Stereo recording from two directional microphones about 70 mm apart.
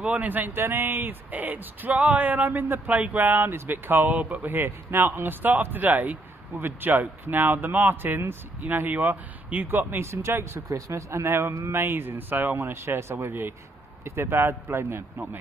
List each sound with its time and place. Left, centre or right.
0.0 s speech: right